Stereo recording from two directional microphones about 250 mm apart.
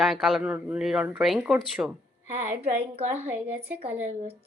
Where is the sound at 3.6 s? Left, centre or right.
Right.